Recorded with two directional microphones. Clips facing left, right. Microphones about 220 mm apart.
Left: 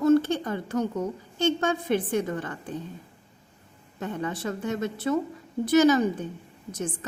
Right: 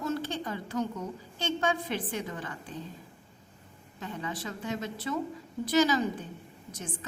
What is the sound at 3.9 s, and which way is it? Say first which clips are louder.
A woman's voice: left 6 dB; 55° left (ahead or behind).